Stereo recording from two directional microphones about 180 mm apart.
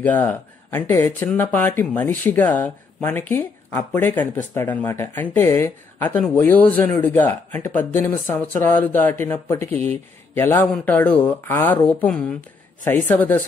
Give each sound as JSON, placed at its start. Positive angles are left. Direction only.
{"t": 0.0, "sound": "speech", "side_deg": 10}